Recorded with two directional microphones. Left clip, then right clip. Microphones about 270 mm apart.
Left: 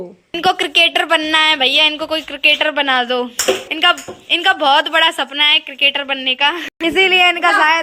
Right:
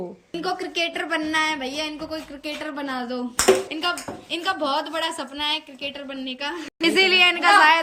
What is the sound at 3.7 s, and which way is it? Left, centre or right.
A woman's voice, centre.